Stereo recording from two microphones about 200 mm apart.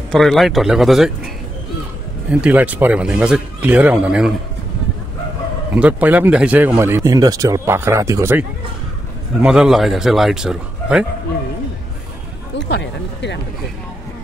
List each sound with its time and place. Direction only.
0.1 s speech: centre (ahead or behind)
2.4 s speech: 5° right (ahead or behind)
5.8 s speech: 10° right (ahead or behind)
12.5 s speech: 55° left (ahead or behind)